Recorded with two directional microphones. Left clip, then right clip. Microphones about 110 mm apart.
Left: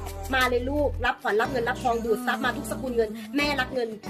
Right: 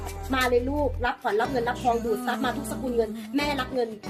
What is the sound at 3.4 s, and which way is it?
Music, 30° left (ahead or behind).